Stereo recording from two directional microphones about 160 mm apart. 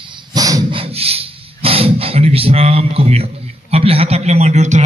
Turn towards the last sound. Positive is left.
turn(degrees=-45)  # may be behind; listen again after turning